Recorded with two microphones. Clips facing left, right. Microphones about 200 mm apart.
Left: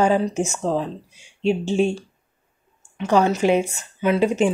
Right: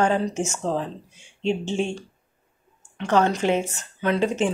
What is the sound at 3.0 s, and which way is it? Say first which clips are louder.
Speech: left 3 dB; 10° left (ahead or behind).